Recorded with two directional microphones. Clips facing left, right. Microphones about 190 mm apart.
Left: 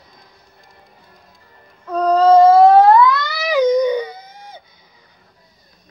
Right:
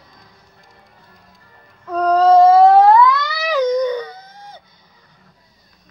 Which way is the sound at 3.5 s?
15° left (ahead or behind).